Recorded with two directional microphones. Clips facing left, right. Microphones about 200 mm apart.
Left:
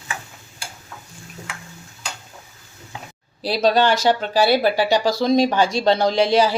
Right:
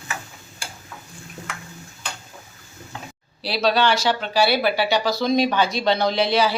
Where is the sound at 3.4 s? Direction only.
45° left (ahead or behind).